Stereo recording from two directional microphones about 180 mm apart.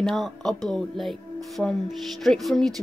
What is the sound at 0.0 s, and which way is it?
Speech, centre (ahead or behind).